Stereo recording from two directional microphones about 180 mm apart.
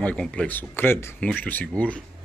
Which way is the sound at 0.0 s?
5° left (ahead or behind).